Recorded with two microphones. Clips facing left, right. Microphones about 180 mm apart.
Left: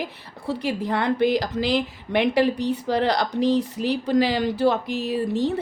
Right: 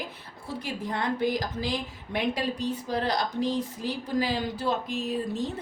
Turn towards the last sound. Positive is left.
turn(degrees=70)  # may be behind; listen again after turning